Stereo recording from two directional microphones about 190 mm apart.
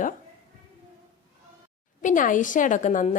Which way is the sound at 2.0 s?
45° left (ahead or behind).